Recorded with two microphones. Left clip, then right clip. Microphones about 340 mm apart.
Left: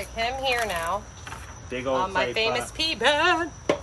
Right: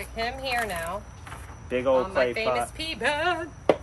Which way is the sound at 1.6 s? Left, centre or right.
Centre.